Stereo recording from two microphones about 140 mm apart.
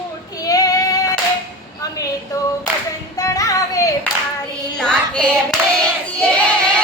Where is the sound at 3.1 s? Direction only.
25° left (ahead or behind).